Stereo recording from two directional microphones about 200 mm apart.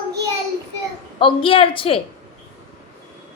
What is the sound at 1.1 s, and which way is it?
Speech, 25° left (ahead or behind).